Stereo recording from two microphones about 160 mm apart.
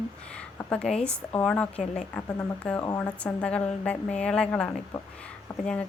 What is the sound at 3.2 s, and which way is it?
Speech, 5° left (ahead or behind).